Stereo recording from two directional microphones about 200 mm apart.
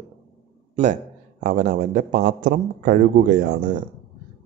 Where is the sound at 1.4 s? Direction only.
40° right (ahead or behind).